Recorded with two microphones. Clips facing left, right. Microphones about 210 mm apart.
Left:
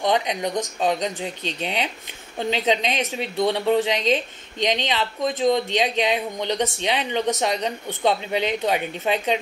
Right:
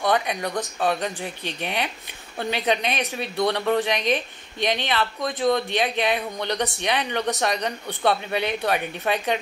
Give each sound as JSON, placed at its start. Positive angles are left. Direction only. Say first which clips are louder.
{"t": 0.0, "sound": "a woman's voice", "louder": "left 1 dB", "side_deg": 20}